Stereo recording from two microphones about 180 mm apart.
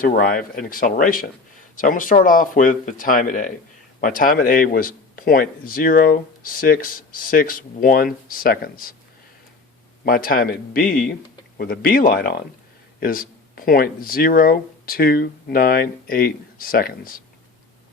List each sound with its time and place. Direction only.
0.0 s a man's voice: 55° left (ahead or behind)
10.1 s a man's voice: 55° left (ahead or behind)